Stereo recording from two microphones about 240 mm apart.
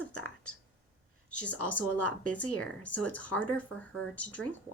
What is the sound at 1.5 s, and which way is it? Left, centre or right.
Speech, left.